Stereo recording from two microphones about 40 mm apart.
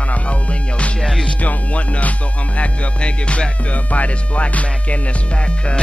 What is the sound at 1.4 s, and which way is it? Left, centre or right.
Music, left.